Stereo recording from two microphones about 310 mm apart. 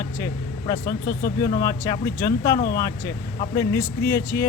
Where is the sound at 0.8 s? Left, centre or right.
Left.